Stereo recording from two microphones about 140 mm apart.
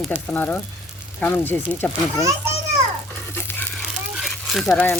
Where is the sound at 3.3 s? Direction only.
15° left (ahead or behind).